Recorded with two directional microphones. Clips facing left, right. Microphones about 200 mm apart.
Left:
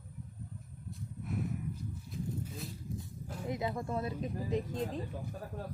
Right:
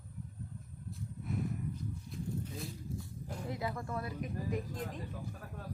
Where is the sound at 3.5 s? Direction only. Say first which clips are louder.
Left 4 dB; 20° left (ahead or behind).